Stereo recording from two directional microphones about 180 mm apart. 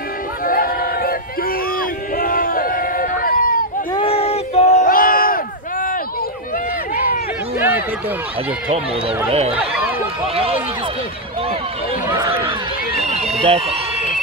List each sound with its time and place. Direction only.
0.5 s chatter: 55° left (ahead or behind)
1.8 s a sound: 50° left (ahead or behind)
3.9 s a sound: 30° left (ahead or behind); by 5.9 s 50° left (ahead or behind)
10.2 s speech: 30° right (ahead or behind)
12.1 s speech: 15° right (ahead or behind)
13.4 s speech: 30° right (ahead or behind)